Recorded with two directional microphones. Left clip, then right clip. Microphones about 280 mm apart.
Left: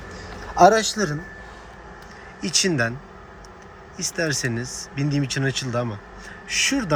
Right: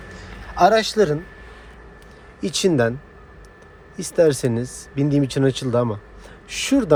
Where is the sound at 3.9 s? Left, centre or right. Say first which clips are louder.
Right 8 dB; right.